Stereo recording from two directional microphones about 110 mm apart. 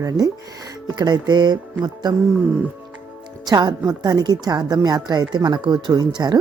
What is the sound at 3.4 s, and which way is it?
Speech, 40° right (ahead or behind).